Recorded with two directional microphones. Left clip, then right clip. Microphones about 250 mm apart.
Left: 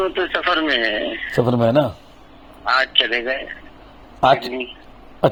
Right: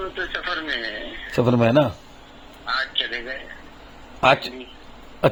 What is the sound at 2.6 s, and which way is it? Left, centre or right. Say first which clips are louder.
Speech: left 7 dB; left.